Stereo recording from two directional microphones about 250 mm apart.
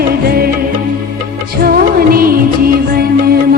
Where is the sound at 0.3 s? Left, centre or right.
Right.